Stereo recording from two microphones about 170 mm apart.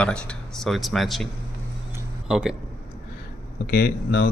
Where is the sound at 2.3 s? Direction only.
5° right (ahead or behind).